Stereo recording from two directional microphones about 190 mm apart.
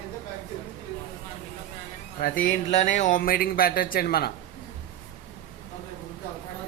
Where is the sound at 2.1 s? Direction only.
50° left (ahead or behind).